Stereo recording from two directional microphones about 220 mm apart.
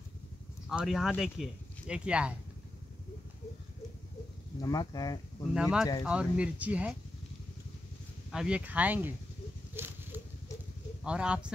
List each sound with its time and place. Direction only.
0.7 s speech: centre (ahead or behind)
4.6 s speech: 15° left (ahead or behind)
5.5 s speech: 5° right (ahead or behind)
8.3 s speech: 5° right (ahead or behind)
9.8 s a sound: 10° right (ahead or behind)
11.1 s speech: 5° right (ahead or behind)